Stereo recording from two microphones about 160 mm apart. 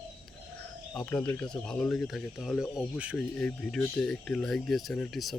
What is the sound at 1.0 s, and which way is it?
Speech, 10° left (ahead or behind).